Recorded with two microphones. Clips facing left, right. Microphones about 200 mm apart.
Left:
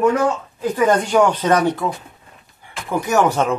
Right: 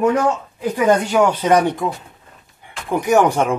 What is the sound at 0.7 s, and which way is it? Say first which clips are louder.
Speech: even; 10° right (ahead or behind).